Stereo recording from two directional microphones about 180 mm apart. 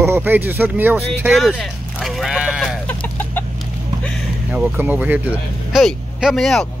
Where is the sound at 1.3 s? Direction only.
Centre (ahead or behind).